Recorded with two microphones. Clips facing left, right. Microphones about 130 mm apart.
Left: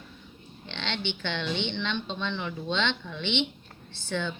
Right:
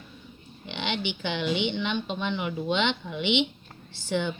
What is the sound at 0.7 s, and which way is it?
Speech, 10° right (ahead or behind).